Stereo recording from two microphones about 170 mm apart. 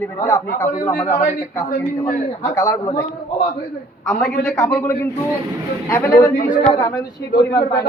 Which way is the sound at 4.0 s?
5° left (ahead or behind).